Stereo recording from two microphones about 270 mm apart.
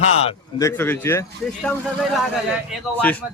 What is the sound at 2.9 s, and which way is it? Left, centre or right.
Speech, centre.